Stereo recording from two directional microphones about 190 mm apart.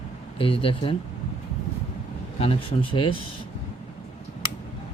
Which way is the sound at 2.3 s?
30° left (ahead or behind).